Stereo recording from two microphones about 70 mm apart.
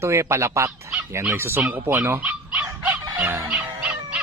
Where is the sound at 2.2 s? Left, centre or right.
Right.